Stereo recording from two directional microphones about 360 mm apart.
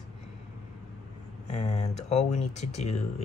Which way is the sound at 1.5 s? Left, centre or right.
Centre.